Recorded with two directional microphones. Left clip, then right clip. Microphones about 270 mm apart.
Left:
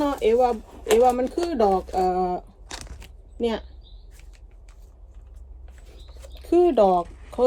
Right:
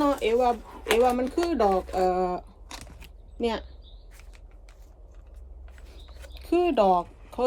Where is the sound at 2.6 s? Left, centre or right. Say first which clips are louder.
Left 4 dB; left.